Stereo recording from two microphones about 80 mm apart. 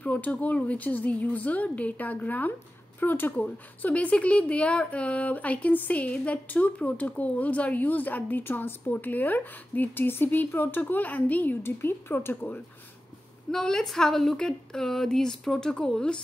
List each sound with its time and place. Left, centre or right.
0.0 s a woman's voice: centre
13.5 s a woman's voice: centre